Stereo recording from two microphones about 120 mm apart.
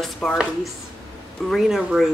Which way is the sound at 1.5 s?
5° right (ahead or behind).